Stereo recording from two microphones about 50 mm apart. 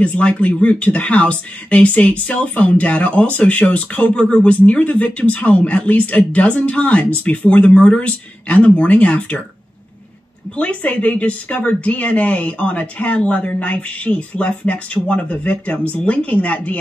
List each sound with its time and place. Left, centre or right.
0.2 s a woman's voice: left
10.5 s a woman's voice: left